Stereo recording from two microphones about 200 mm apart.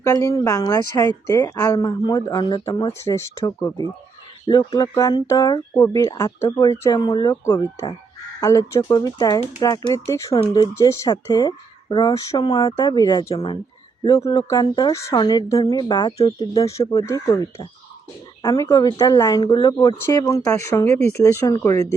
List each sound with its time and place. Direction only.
0.0 s a woman's voice: 15° left (ahead or behind)